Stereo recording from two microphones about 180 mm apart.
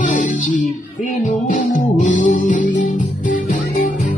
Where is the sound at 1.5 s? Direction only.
45° left (ahead or behind).